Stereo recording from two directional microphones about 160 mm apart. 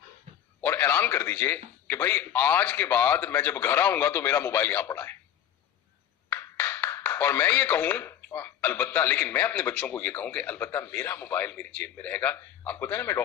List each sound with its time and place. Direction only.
0.3 s a sound: 50° right (ahead or behind)
0.6 s speech: 15° left (ahead or behind)
6.3 s speech: 15° left (ahead or behind)